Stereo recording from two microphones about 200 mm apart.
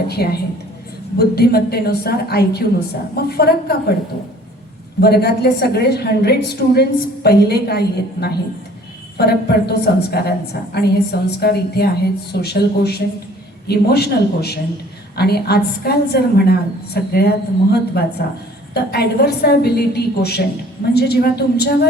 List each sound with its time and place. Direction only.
0.1 s a woman's voice: 50° left (ahead or behind)
4.9 s a woman's voice: 55° left (ahead or behind)